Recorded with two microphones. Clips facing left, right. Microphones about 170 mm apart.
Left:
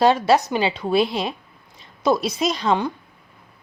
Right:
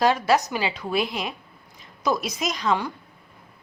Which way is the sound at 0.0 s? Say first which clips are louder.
Left 4 dB; 30° left (ahead or behind).